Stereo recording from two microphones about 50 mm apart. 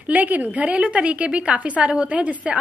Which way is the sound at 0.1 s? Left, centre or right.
Right.